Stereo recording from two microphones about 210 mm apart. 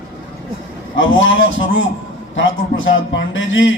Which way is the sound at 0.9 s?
65° left (ahead or behind).